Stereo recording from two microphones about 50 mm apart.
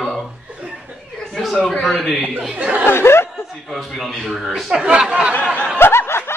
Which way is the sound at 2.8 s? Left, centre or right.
Left.